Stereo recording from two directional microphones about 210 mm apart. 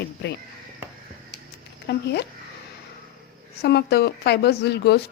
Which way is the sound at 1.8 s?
50° left (ahead or behind).